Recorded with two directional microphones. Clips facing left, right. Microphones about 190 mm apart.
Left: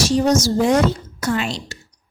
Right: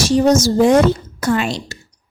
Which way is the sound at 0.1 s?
50° right (ahead or behind).